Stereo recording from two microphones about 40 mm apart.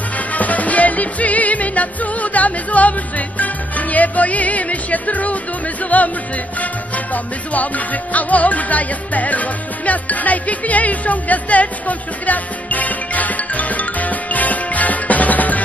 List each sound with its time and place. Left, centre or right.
0.3 s music: left
5.9 s speech: left
7.5 s music: left